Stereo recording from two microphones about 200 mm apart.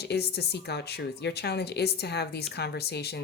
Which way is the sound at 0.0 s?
55° left (ahead or behind).